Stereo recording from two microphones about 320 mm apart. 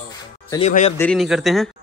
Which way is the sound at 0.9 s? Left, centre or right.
Centre.